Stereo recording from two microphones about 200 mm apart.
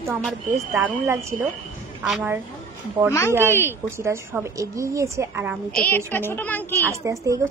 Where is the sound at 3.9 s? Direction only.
15° right (ahead or behind).